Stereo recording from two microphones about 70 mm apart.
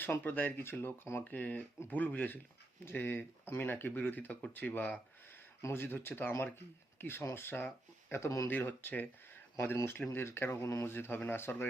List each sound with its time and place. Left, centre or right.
0.0 s speech: left
5.7 s speech: left
8.1 s speech: left
8.4 s speech: left
10.1 s speech: left